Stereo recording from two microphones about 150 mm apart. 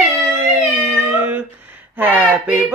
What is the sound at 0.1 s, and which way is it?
Music, 20° right (ahead or behind).